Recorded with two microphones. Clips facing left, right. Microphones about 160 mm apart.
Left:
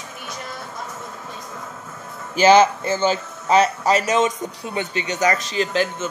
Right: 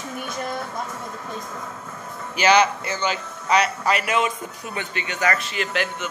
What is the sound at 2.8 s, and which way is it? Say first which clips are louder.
Speech: left 6 dB; 25° left (ahead or behind).